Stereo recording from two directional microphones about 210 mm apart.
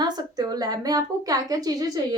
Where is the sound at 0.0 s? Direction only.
20° right (ahead or behind).